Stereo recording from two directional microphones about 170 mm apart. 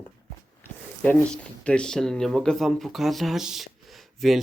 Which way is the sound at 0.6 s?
5° left (ahead or behind).